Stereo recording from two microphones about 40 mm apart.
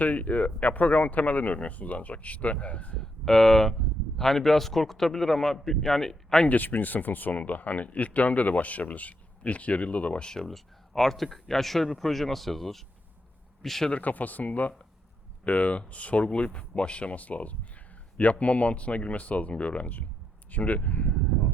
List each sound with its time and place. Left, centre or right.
0.0 s speech: left
3.0 s a man's voice: centre
6.5 s speech: left
10.2 s speech: centre
10.5 s a man's voice: centre
14.0 s speech: left